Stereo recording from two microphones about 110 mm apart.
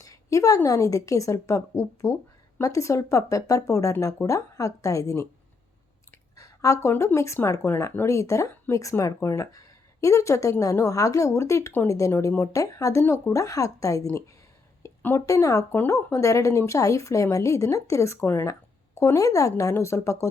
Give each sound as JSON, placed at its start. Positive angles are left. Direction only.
{"t": 0.0, "sound": "a woman's voice", "side_deg": 30}
{"t": 6.3, "sound": "a sound", "side_deg": 30}
{"t": 6.9, "sound": "a woman's voice", "side_deg": 25}